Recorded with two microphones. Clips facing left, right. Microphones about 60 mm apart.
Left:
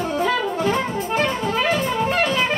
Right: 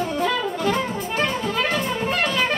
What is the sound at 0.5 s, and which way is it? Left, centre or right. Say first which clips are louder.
Jazz: left 2 dB; left.